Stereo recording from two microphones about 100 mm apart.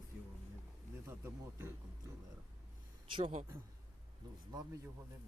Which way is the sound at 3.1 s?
65° right (ahead or behind).